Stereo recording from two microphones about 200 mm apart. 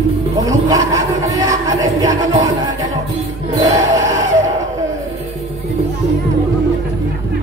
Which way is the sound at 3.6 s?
15° right (ahead or behind).